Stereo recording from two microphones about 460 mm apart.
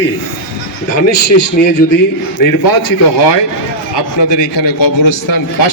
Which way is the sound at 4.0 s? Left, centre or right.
Left.